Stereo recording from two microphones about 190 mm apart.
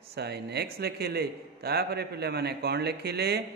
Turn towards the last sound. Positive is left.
turn(degrees=-60)  # may be behind; listen again after turning